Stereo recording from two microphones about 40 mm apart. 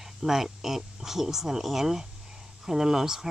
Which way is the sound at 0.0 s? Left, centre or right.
Centre.